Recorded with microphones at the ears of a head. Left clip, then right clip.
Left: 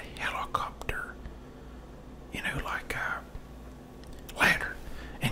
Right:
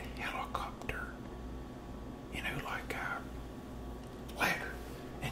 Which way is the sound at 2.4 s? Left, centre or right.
Left.